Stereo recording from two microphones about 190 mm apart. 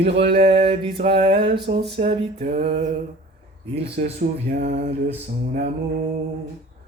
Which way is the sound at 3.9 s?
55° right (ahead or behind).